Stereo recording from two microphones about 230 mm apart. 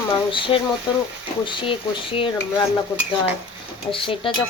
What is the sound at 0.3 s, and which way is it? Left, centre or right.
Speech, left.